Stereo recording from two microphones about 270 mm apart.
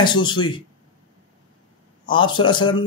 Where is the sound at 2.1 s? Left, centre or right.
Centre.